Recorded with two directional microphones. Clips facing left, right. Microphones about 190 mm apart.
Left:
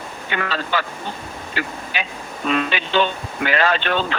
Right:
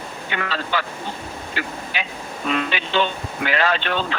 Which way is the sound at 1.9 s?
45° left (ahead or behind).